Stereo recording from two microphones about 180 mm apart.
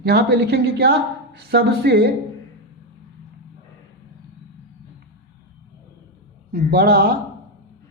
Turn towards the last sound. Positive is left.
turn(degrees=-55)  # may be behind; listen again after turning